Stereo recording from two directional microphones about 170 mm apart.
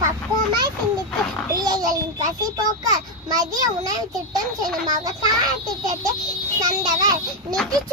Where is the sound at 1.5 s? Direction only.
25° right (ahead or behind).